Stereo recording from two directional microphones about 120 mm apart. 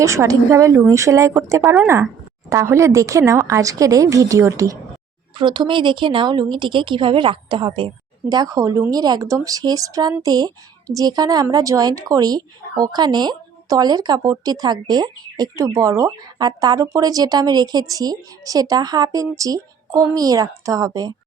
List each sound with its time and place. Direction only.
0.0 s a woman's voice: 25° right (ahead or behind)
2.5 s a woman's voice: 25° right (ahead or behind)
5.4 s a woman's voice: 40° right (ahead or behind)